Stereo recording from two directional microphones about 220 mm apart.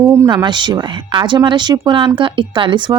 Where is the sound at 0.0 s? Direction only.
15° right (ahead or behind).